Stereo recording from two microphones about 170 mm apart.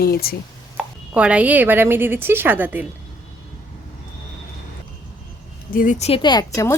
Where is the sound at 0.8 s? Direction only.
5° right (ahead or behind).